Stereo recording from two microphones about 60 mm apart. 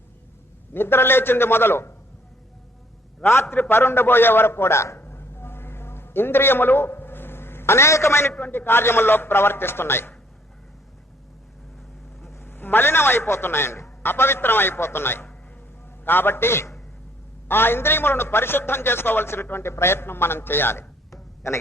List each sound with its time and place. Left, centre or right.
0.7 s a man's voice: left
3.4 s a man's voice: left
4.9 s a sound: left
8.3 s a man's voice: left
12.3 s a man's voice: left
21.1 s a sound: left